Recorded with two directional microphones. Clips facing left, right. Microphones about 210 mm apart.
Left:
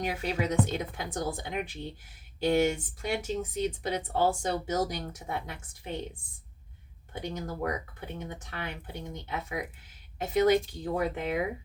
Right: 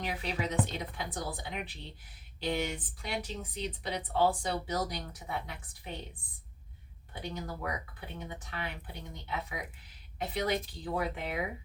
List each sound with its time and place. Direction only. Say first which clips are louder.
0.0 s speech: left 5 dB; 45° left (ahead or behind)
7.1 s speech: left 4 dB; 45° left (ahead or behind)